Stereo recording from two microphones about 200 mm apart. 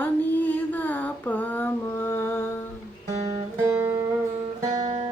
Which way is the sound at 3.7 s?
10° right (ahead or behind).